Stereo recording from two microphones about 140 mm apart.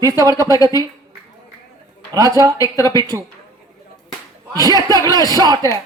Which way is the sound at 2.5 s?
25° left (ahead or behind).